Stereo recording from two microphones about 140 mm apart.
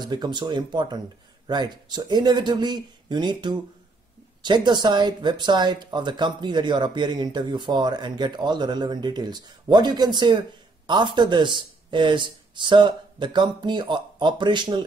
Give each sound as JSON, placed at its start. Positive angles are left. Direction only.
{"t": 0.1, "sound": "speech", "side_deg": -30}